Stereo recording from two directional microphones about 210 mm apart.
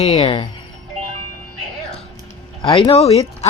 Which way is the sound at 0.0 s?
30° left (ahead or behind).